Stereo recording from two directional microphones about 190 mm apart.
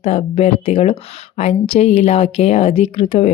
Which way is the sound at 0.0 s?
30° left (ahead or behind).